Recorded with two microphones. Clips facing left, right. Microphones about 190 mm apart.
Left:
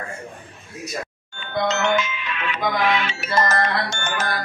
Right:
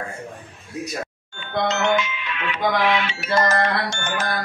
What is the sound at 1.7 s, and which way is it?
Music, 45° left (ahead or behind).